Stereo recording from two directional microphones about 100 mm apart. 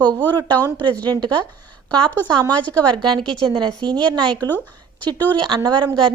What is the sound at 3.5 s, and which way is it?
Speech, 45° right (ahead or behind).